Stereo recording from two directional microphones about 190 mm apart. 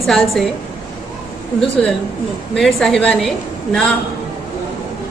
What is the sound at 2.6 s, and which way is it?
A woman's voice, centre (ahead or behind).